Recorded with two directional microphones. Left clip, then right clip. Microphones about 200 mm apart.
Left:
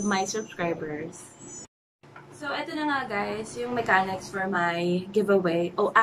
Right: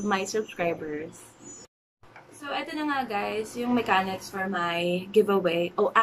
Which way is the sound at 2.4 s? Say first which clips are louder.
Left 1 dB; 5° right (ahead or behind).